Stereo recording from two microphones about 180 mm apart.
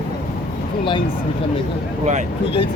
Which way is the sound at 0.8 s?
25° left (ahead or behind).